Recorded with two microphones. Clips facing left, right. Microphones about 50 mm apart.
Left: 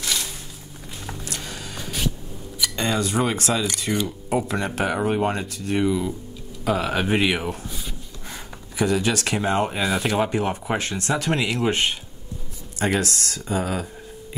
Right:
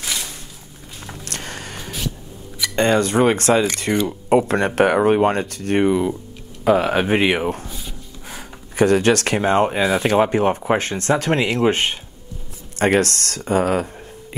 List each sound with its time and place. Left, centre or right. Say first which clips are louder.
0.0 s a sound: even; centre
1.3 s vehicle: right 3 dB; right
1.8 s a sound: left 3 dB; centre
2.6 s speech: right 7 dB; right
4.9 s speech: right 7 dB; right
7.6 s speech: right 1 dB; centre
8.4 s speech: right 7 dB; right
12.7 s speech: right 6 dB; right